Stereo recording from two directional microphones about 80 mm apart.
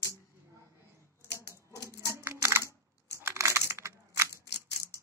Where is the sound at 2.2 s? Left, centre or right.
Right.